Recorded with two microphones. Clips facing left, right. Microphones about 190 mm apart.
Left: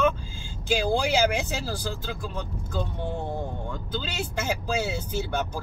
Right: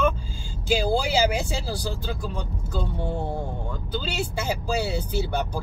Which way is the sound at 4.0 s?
10° right (ahead or behind).